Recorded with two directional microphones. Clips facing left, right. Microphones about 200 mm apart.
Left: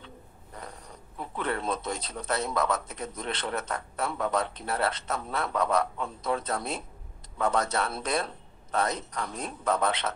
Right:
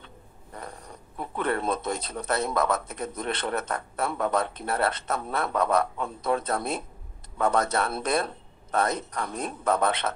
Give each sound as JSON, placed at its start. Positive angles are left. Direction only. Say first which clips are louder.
{"t": 0.6, "sound": "speech", "louder": "right 3 dB", "side_deg": -55}